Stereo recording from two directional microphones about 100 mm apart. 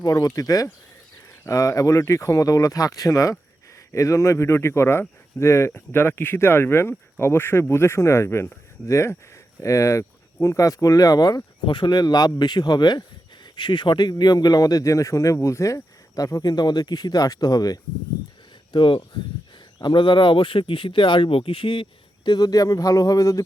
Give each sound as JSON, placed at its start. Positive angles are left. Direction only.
{"t": 0.0, "sound": "speech", "side_deg": 40}
{"t": 11.6, "sound": "speech", "side_deg": 55}
{"t": 18.7, "sound": "speech", "side_deg": 55}